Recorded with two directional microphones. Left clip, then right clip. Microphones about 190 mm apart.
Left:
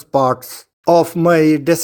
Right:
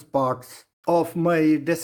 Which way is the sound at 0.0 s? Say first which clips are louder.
Left 8 dB; 40° left (ahead or behind).